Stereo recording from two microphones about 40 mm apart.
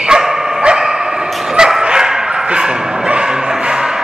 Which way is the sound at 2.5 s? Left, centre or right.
Centre.